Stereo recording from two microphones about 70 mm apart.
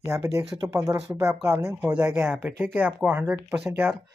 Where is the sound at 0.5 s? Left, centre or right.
Right.